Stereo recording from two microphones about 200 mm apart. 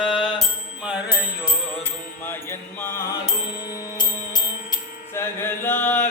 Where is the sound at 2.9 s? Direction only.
15° left (ahead or behind).